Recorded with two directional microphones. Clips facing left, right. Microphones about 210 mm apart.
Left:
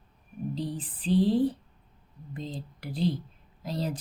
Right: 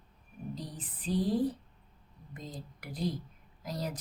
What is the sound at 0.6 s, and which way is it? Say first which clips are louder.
Speech: left 10 dB; 30° left (ahead or behind).